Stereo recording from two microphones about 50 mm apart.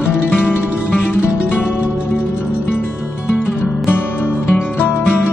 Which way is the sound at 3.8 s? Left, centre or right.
Left.